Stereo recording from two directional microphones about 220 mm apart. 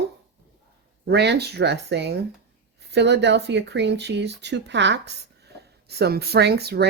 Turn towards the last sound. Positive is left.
turn(degrees=-45)  # may be behind; listen again after turning